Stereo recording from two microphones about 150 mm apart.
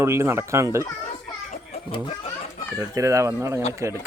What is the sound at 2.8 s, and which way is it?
Speech, 20° right (ahead or behind).